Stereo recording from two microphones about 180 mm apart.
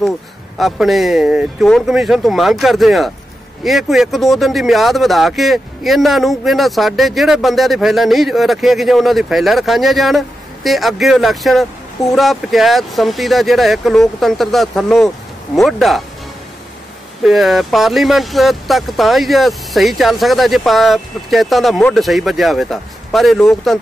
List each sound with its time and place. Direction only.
0.6 s speech: centre (ahead or behind)
17.2 s speech: centre (ahead or behind)